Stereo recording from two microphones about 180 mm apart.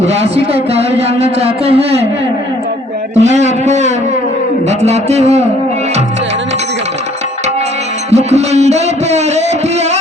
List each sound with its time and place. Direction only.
0.0 s a man's voice: 35° right (ahead or behind)
3.2 s a man's voice: 40° right (ahead or behind)
8.1 s a sound: 35° right (ahead or behind)